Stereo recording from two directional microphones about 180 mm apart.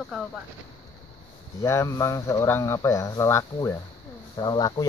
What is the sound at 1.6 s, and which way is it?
Speech, 15° left (ahead or behind).